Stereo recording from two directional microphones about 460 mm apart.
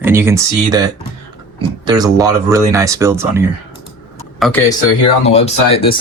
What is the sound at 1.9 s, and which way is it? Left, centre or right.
Speech, centre.